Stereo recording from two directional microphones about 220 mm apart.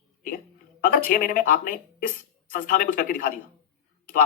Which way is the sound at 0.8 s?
40° left (ahead or behind).